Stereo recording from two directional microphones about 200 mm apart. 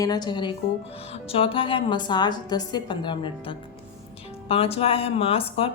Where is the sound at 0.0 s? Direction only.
20° left (ahead or behind).